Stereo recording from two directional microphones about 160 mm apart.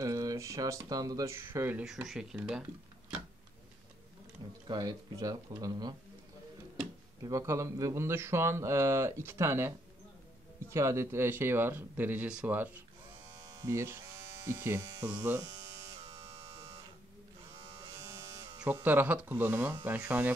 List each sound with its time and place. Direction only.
0.0 s speech: 20° right (ahead or behind)
1.9 s speech: 5° right (ahead or behind)
4.6 s speech: 25° right (ahead or behind)
7.2 s speech: 20° right (ahead or behind)
16.1 s electric shaver: 20° right (ahead or behind)
18.6 s speech: 10° right (ahead or behind)